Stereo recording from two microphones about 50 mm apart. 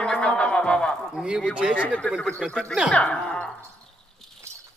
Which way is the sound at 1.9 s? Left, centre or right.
Left.